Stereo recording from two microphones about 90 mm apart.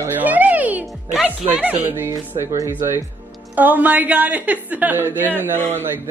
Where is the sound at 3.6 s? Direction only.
20° right (ahead or behind).